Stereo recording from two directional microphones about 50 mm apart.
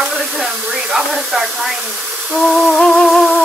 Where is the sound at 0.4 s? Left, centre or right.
Centre.